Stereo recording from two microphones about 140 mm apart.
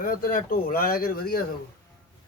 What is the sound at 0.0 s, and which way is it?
Speech, 90° left.